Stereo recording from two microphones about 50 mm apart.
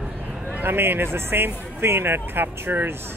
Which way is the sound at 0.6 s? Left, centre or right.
Right.